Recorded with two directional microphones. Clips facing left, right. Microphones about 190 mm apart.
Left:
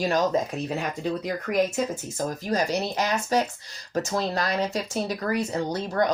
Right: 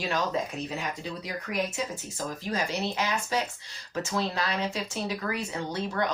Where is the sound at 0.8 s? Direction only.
50° left (ahead or behind).